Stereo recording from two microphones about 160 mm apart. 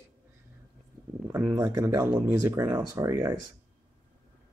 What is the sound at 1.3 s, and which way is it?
Speech, 20° right (ahead or behind).